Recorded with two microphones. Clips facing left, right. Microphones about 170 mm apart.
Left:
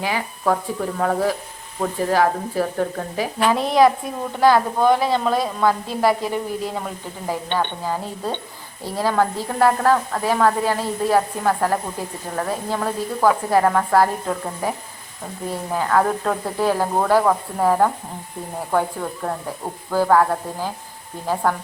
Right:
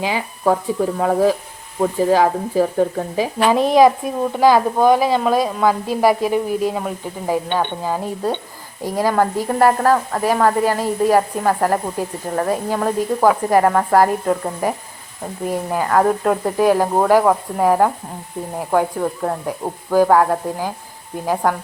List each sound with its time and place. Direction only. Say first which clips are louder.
0.0 s speech: right 3 dB; 15° right (ahead or behind)